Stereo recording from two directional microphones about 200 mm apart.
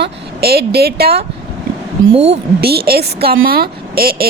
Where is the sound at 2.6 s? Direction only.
50° right (ahead or behind).